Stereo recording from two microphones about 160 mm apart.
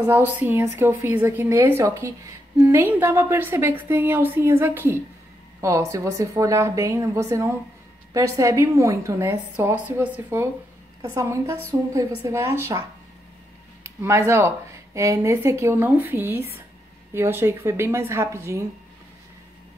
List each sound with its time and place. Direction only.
0.0 s a woman's voice: 15° right (ahead or behind)
13.8 s a woman's voice: 15° right (ahead or behind)